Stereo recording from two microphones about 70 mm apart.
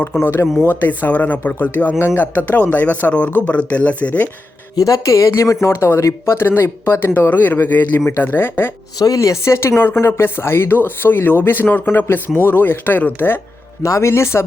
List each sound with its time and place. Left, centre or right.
0.2 s speech: left
4.8 s speech: left
9.0 s speech: left
13.8 s speech: left
14.1 s speech: left